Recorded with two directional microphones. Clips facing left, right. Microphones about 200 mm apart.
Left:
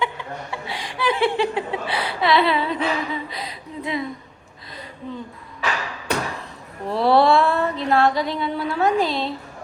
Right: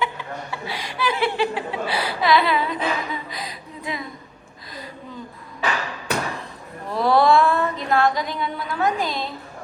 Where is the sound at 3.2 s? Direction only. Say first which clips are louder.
Left 1 dB; 30° left (ahead or behind).